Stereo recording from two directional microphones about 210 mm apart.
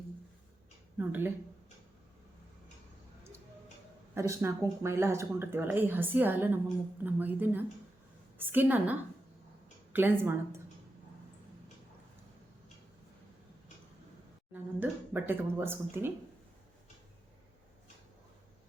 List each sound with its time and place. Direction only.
0.9 s speech: 10° right (ahead or behind)
4.1 s speech: 15° right (ahead or behind)
14.5 s speech: 10° right (ahead or behind)